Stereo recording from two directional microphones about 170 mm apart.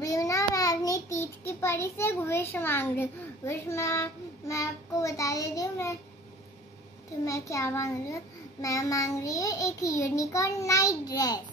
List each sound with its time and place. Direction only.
0.0 s a child's voice: 20° left (ahead or behind)
7.2 s a child's voice: 20° left (ahead or behind)